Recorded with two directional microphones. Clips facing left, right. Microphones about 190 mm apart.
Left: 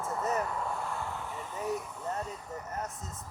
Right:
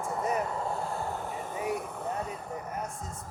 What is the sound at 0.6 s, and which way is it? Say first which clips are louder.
Vehicle: right 3 dB; 30° right (ahead or behind).